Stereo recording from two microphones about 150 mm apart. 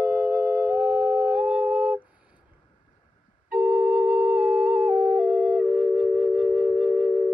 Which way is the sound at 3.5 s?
5° right (ahead or behind).